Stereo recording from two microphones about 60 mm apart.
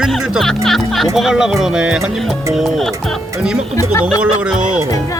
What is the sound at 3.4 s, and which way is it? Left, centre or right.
Speech, centre.